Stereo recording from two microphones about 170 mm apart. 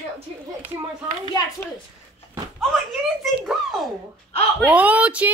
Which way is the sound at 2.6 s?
Centre (ahead or behind).